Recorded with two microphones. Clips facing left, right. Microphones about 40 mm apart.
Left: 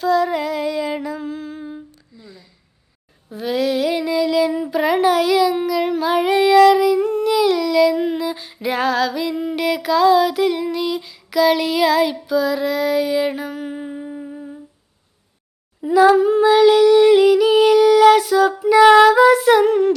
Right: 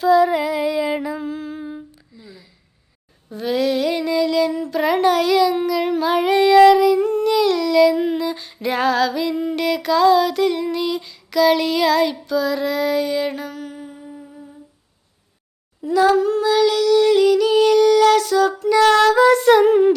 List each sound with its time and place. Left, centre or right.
0.0 s humming: centre
3.2 s a sound: centre; by 14.6 s left
15.8 s humming: centre